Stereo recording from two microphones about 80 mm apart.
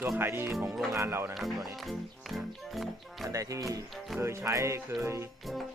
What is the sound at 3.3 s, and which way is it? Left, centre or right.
Speech, right.